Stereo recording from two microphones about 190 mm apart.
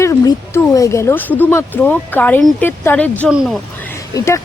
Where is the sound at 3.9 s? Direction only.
15° left (ahead or behind).